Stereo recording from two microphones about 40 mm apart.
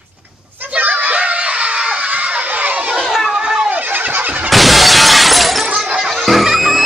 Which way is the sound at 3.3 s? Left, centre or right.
Right.